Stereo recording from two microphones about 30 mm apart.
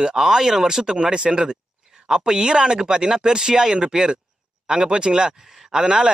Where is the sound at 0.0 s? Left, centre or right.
Right.